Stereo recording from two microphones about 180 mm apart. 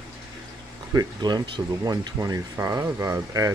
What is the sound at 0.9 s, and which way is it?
Speech, 20° right (ahead or behind).